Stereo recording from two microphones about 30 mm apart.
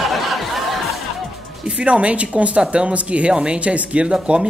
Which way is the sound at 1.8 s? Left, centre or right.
Right.